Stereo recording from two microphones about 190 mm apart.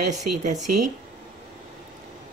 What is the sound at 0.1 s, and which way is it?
Speech, 40° right (ahead or behind).